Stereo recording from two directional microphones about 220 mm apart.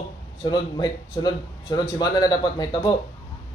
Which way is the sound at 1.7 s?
20° left (ahead or behind).